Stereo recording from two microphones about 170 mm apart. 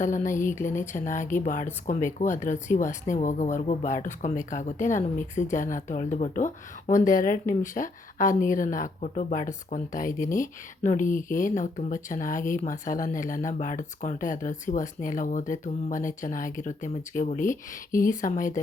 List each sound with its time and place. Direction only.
0.0 s speech: 50° left (ahead or behind)
0.3 s speech: 15° left (ahead or behind)
0.8 s speech: 50° left (ahead or behind)